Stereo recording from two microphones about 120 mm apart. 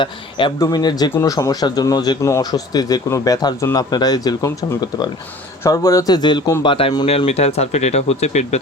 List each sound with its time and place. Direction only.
0.0 s speech: 45° left (ahead or behind)
5.6 s speech: 25° left (ahead or behind); by 6.9 s 45° left (ahead or behind)
7.3 s speech: 60° left (ahead or behind)